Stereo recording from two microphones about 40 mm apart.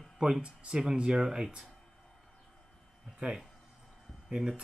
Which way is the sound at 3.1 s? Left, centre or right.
Right.